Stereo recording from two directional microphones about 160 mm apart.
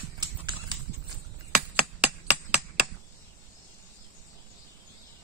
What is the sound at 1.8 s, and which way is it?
Finger snapping, 10° right (ahead or behind).